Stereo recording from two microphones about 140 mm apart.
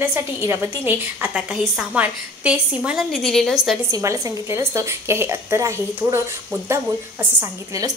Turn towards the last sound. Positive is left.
turn(degrees=-25)  # may be behind; listen again after turning